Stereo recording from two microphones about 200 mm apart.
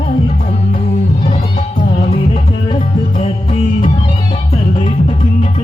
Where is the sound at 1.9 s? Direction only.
30° left (ahead or behind).